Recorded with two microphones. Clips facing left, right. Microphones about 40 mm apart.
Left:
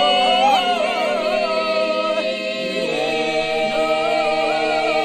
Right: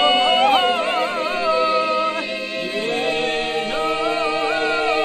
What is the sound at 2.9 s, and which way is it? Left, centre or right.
Music, right.